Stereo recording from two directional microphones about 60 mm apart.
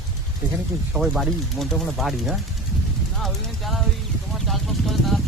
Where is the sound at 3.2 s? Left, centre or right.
Centre.